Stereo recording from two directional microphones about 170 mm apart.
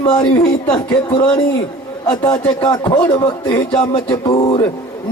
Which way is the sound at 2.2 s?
15° left (ahead or behind).